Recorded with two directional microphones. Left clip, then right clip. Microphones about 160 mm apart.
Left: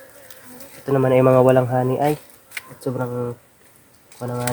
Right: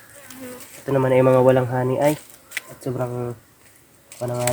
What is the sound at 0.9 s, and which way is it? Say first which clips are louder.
Speech: left 1 dB; 45° left (ahead or behind).